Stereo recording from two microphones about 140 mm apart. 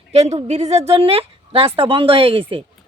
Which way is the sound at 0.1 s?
50° right (ahead or behind).